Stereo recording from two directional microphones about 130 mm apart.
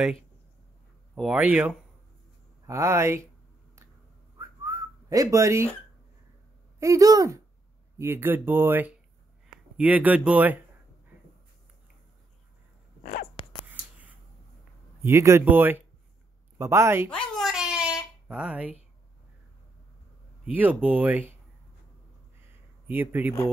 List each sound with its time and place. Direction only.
1.1 s speech: 5° right (ahead or behind)
2.6 s speech: 20° right (ahead or behind)
4.4 s whistling: 25° right (ahead or behind)
6.8 s speech: 25° right (ahead or behind)
13.0 s a sound: 90° left
13.7 s a sound: 10° right (ahead or behind)
15.0 s speech: 20° right (ahead or behind)
17.1 s a sound: 5° left (ahead or behind)
20.5 s speech: 15° right (ahead or behind)
22.8 s speech: 15° right (ahead or behind)